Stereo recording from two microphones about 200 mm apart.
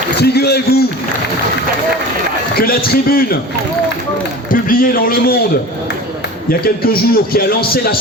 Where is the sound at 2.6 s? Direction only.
50° left (ahead or behind).